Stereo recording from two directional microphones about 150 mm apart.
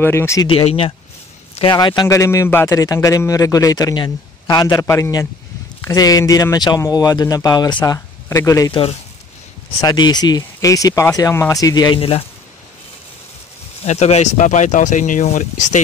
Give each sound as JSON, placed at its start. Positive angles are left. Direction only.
{"t": 0.0, "sound": "speech", "side_deg": 15}
{"t": 0.5, "sound": "speech", "side_deg": 40}
{"t": 9.8, "sound": "speech", "side_deg": 25}
{"t": 13.8, "sound": "speech", "side_deg": 50}